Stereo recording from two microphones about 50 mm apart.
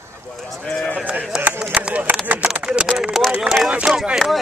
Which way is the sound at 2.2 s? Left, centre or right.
Right.